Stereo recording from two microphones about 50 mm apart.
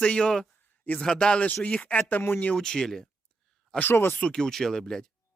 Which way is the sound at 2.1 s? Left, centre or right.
Left.